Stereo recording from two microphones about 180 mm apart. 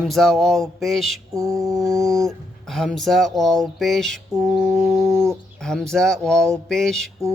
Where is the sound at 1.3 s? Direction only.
15° right (ahead or behind).